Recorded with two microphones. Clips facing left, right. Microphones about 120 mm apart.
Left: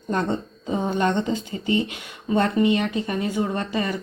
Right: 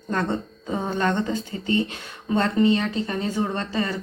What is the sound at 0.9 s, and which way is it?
A woman's voice, 15° left (ahead or behind).